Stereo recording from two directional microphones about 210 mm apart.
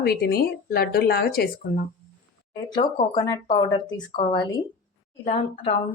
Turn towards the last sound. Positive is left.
turn(degrees=30)  # may be behind; listen again after turning